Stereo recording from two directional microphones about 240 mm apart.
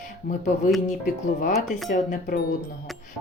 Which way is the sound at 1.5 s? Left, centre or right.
Centre.